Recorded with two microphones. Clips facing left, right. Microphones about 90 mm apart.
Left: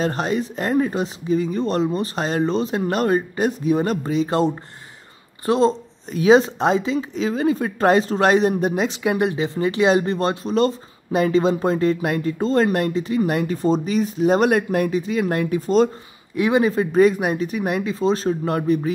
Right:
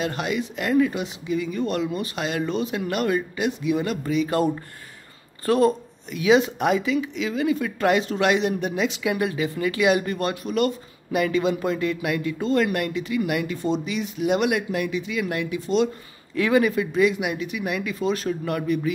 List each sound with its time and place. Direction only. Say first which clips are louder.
0.0 s speech: left 4 dB; 35° left (ahead or behind)
6.0 s speech: left 4 dB; 35° left (ahead or behind)
16.3 s speech: left 2 dB; 20° left (ahead or behind)
16.7 s speech: left 5 dB; 40° left (ahead or behind)